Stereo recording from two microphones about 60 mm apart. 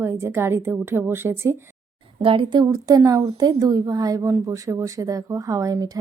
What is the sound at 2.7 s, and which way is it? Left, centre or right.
Speech, right.